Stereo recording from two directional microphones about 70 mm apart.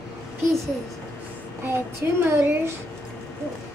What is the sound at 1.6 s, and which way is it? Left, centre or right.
Child singing, right.